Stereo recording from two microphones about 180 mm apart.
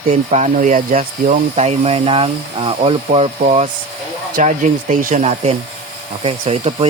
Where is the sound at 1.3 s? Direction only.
35° right (ahead or behind).